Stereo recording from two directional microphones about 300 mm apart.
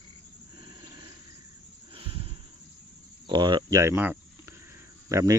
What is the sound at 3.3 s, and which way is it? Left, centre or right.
Speech, centre.